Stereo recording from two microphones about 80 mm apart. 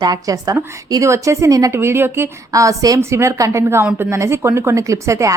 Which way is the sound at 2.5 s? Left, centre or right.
Right.